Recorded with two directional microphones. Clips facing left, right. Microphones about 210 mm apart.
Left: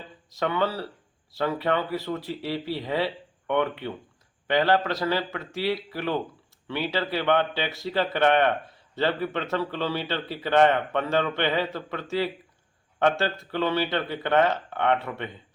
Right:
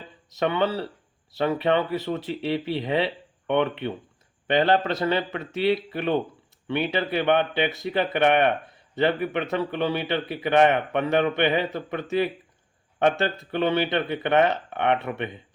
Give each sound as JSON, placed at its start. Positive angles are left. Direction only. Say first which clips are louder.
{"t": 0.3, "sound": "a man's voice", "louder": "right 2 dB", "side_deg": -20}